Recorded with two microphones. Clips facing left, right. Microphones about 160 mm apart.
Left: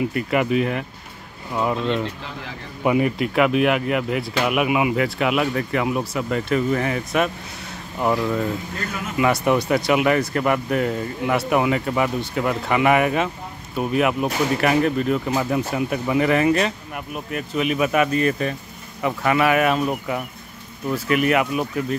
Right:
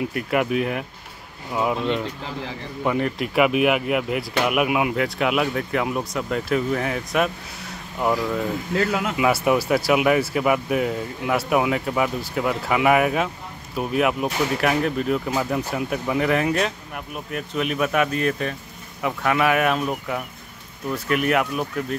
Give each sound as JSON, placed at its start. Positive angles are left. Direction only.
{"t": 0.0, "sound": "speech", "side_deg": 0}
{"t": 2.8, "sound": "speech", "side_deg": 10}
{"t": 3.2, "sound": "speech", "side_deg": -5}
{"t": 8.7, "sound": "speech", "side_deg": -80}
{"t": 9.1, "sound": "speech", "side_deg": -5}